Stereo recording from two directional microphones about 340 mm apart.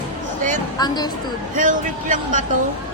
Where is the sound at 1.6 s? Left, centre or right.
Right.